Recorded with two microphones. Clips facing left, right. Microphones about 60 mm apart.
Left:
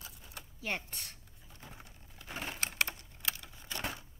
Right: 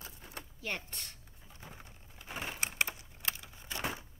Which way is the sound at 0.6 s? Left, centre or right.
Centre.